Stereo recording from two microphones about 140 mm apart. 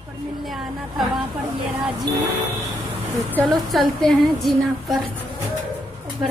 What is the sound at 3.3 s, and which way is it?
A woman's voice, centre (ahead or behind).